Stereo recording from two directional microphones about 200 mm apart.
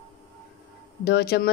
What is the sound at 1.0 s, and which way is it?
Speech, 50° left (ahead or behind).